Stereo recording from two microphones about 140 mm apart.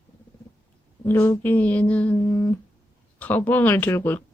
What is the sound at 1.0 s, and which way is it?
Speech, 15° left (ahead or behind).